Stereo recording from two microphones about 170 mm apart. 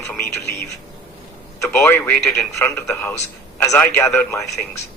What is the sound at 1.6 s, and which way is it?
Speech, 15° left (ahead or behind).